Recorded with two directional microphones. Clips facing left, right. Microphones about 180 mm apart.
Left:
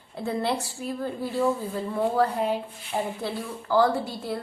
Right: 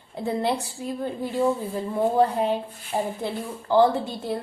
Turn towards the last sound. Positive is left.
turn(degrees=-20)  # may be behind; listen again after turning